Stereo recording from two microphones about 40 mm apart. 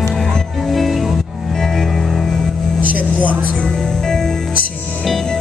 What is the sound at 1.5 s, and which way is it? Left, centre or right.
Music, centre.